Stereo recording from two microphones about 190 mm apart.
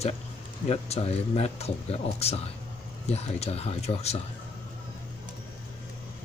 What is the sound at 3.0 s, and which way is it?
A man's voice, 35° left (ahead or behind).